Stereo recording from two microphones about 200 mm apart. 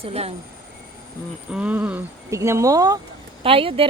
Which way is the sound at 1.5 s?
5° right (ahead or behind).